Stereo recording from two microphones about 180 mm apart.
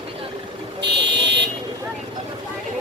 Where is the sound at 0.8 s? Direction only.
75° right (ahead or behind).